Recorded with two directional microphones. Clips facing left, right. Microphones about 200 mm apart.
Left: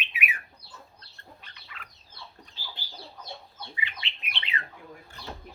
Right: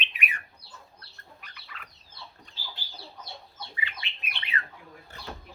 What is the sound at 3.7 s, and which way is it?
Bird, 20° left (ahead or behind).